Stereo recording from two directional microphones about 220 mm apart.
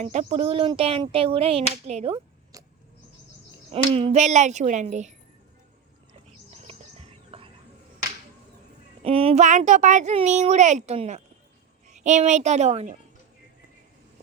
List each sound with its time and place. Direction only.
0.0 s speech: 30° right (ahead or behind)
3.7 s a child's voice: 25° right (ahead or behind)
7.3 s frog: 25° right (ahead or behind)
9.0 s a child's voice: 25° right (ahead or behind)